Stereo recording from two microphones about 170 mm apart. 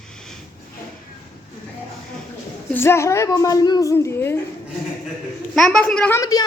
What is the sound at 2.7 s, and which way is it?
A woman's voice, 15° left (ahead or behind).